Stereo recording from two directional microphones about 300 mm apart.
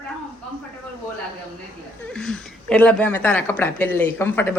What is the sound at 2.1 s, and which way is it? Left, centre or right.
Speech, centre.